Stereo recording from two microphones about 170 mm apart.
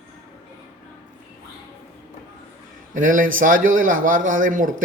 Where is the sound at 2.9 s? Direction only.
50° right (ahead or behind).